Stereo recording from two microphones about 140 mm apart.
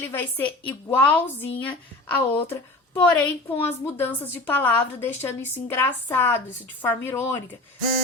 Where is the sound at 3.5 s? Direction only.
15° left (ahead or behind).